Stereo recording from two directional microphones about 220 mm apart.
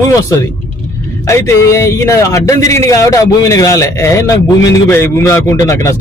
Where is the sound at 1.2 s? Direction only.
10° left (ahead or behind).